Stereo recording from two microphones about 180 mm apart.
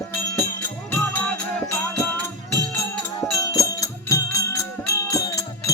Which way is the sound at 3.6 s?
15° left (ahead or behind).